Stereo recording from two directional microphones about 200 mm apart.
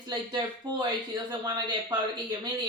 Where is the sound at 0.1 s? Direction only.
20° right (ahead or behind).